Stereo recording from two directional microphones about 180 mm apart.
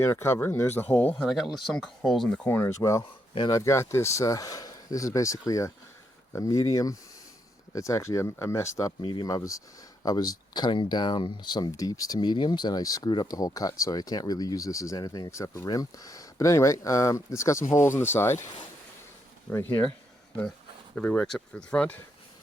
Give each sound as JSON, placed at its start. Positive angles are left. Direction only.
{"t": 0.0, "sound": "speech", "side_deg": 15}
{"t": 1.3, "sound": "speech", "side_deg": 0}
{"t": 9.0, "sound": "speech", "side_deg": 25}
{"t": 19.5, "sound": "speech", "side_deg": 10}
{"t": 20.9, "sound": "speech", "side_deg": 5}